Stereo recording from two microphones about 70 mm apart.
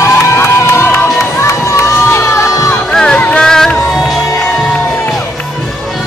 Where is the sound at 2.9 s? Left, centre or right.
Centre.